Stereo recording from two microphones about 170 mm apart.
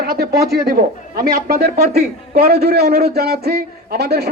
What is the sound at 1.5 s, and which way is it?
A man's voice, 65° right (ahead or behind).